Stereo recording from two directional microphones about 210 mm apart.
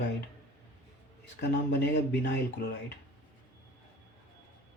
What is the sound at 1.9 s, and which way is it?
Speech, 55° left (ahead or behind).